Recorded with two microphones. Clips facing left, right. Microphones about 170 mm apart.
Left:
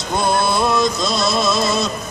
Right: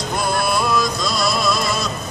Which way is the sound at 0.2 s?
25° left (ahead or behind).